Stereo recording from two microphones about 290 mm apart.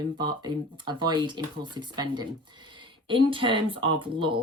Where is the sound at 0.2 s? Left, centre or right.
Centre.